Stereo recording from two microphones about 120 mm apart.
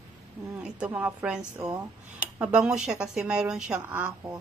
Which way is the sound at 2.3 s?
10° right (ahead or behind).